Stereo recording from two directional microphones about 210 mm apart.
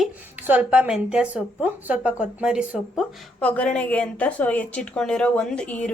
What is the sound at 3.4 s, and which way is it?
A woman's voice, 5° left (ahead or behind).